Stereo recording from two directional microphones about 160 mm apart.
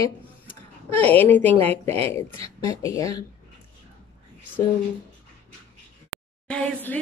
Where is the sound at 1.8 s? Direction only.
40° right (ahead or behind).